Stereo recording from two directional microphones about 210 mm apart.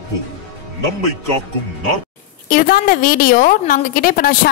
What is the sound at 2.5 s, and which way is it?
A woman's voice, 40° left (ahead or behind).